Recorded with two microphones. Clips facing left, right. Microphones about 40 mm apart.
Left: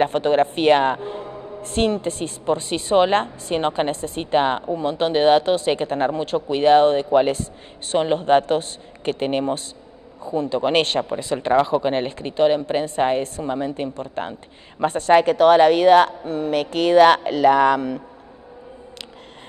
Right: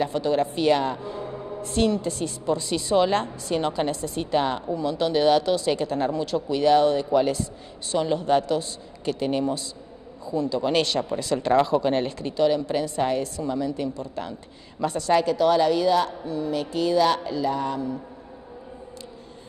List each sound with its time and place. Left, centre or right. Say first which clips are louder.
0.0 s a woman's voice: left 5 dB; left
11.1 s a woman's voice: left 2 dB; left